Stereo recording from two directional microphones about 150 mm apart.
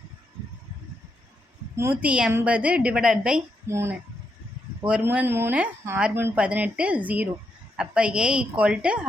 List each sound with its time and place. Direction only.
1.7 s a woman's voice: 15° right (ahead or behind)
3.7 s a woman's voice: 15° right (ahead or behind)